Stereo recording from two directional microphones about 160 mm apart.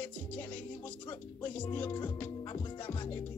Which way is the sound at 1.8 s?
30° left (ahead or behind).